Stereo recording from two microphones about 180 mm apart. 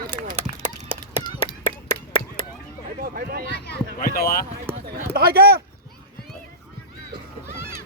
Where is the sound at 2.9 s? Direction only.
55° right (ahead or behind).